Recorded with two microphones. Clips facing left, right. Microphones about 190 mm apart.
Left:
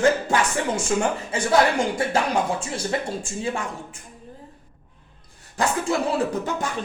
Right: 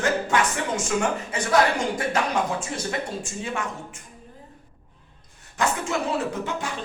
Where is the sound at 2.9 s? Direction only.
30° left (ahead or behind).